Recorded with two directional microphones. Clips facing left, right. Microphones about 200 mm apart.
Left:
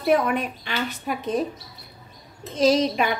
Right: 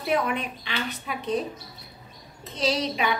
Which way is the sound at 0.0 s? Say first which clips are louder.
Left 5 dB; 50° left (ahead or behind).